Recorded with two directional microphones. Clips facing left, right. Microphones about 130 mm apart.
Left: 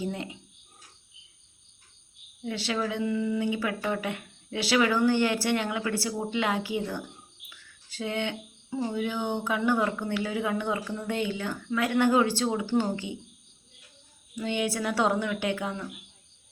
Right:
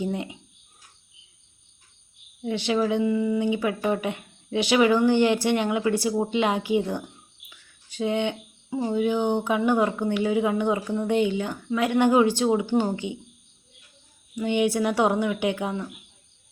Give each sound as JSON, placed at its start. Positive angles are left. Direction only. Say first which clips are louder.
{"t": 0.0, "sound": "speech", "louder": "right 4 dB", "side_deg": -20}
{"t": 2.4, "sound": "speech", "louder": "right 6 dB", "side_deg": -20}
{"t": 14.3, "sound": "speech", "louder": "right 6 dB", "side_deg": -15}